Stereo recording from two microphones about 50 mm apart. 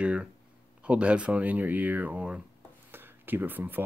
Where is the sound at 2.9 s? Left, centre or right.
Right.